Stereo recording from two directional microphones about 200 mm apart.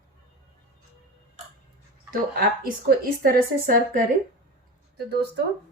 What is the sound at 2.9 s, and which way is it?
Speech, 50° right (ahead or behind).